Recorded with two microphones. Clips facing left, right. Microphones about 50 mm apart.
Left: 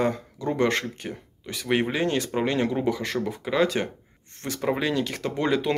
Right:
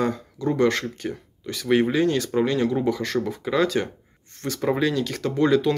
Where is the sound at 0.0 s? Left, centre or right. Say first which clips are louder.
Right 1 dB; left.